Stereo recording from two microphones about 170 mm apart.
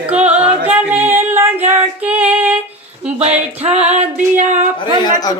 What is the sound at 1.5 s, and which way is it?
Speech, 35° right (ahead or behind).